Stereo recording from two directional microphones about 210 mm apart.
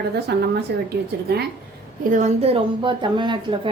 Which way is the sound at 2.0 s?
35° right (ahead or behind).